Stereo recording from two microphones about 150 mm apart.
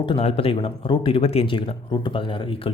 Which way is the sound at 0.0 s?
35° left (ahead or behind).